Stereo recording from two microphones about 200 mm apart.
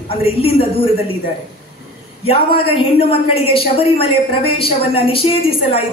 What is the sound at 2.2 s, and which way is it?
A man's voice, 30° left (ahead or behind).